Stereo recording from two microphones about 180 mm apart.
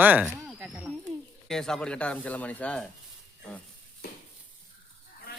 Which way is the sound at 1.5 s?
5° left (ahead or behind).